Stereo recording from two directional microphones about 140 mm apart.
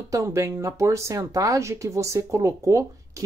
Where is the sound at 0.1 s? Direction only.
20° right (ahead or behind).